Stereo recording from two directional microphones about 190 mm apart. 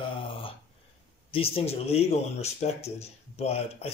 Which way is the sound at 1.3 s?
30° left (ahead or behind).